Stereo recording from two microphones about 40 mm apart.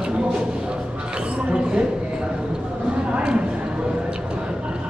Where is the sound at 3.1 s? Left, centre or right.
Right.